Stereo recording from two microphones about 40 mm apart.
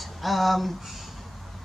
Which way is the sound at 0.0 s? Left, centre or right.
Centre.